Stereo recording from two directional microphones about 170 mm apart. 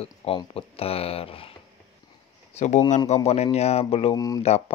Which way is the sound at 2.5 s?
45° left (ahead or behind).